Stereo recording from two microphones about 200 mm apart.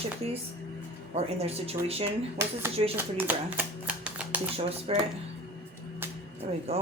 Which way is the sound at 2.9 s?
10° right (ahead or behind).